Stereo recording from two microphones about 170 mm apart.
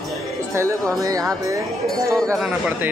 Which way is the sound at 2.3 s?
5° right (ahead or behind).